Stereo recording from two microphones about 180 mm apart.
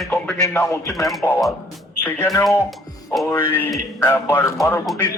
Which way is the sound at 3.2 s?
15° left (ahead or behind).